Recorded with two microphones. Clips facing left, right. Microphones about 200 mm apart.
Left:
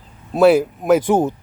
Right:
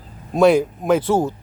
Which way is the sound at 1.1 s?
20° left (ahead or behind).